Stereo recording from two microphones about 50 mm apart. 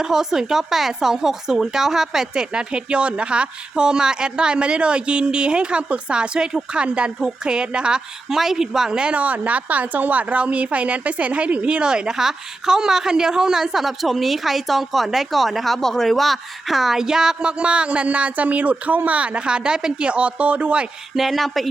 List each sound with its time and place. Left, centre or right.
0.0 s speech: centre
8.3 s speech: centre
9.2 s a woman's voice: right
21.2 s speech: centre